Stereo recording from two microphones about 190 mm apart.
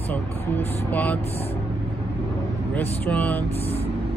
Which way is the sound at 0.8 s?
10° left (ahead or behind).